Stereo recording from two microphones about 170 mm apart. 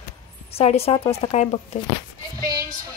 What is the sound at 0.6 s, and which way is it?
Speech, 35° left (ahead or behind).